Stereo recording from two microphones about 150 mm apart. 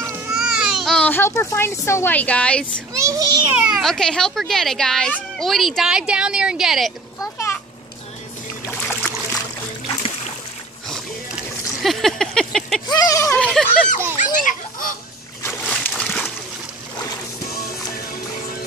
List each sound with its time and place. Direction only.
0.3 s a child's voice: 5° right (ahead or behind)
2.9 s a child's voice: 20° right (ahead or behind)
3.5 s speech: centre (ahead or behind)
7.2 s a sound: 20° left (ahead or behind)
8.7 s a sound: 5° left (ahead or behind)
11.8 s a sound: centre (ahead or behind)
12.8 s speech: 25° left (ahead or behind)
13.4 s speech: 5° left (ahead or behind)
14.2 s speech: 60° left (ahead or behind)
15.6 s slosh: 5° left (ahead or behind)